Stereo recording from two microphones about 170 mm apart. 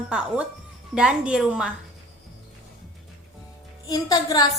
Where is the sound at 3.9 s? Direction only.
20° left (ahead or behind).